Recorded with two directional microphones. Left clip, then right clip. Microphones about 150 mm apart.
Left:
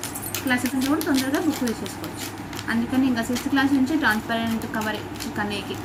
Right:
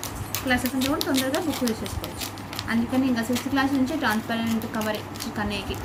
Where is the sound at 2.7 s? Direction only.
5° right (ahead or behind).